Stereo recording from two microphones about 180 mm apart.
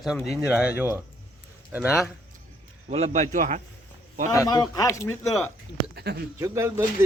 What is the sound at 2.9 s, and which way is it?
Speech, 35° right (ahead or behind).